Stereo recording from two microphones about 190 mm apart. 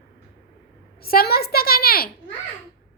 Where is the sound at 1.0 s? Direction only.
55° left (ahead or behind).